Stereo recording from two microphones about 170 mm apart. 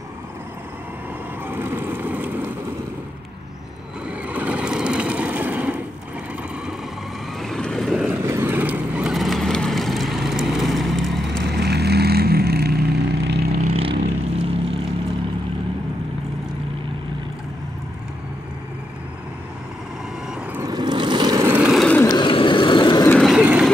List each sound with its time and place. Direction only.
1.5 s vehicle: 15° right (ahead or behind)
4.3 s vehicle: 10° right (ahead or behind)
7.3 s vehicle: centre (ahead or behind)
8.2 s vehicle: 15° right (ahead or behind)
11.4 s vehicle: 75° right (ahead or behind)
13.6 s vehicle: 35° right (ahead or behind)
20.5 s vehicle: 20° right (ahead or behind); by 21.8 s 5° right (ahead or behind)
21.8 s vehicle: 10° left (ahead or behind)
22.1 s vehicle: 30° left (ahead or behind)
23.0 s vehicle: 5° left (ahead or behind)
23.3 s vehicle: 5° right (ahead or behind)